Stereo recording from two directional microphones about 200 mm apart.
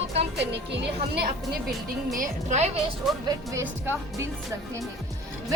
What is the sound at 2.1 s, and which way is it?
Speech, 40° right (ahead or behind).